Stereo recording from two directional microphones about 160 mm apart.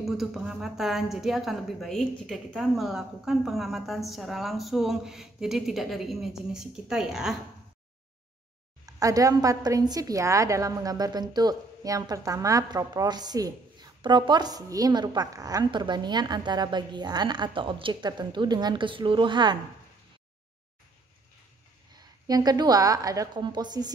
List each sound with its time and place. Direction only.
0.0 s a woman's voice: centre (ahead or behind)
8.8 s a woman's voice: 20° right (ahead or behind)
21.9 s a woman's voice: 25° right (ahead or behind)